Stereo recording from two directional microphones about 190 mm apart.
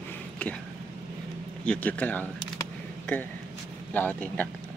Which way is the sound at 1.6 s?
10° left (ahead or behind).